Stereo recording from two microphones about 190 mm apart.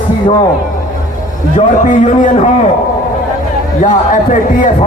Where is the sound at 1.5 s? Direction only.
40° left (ahead or behind).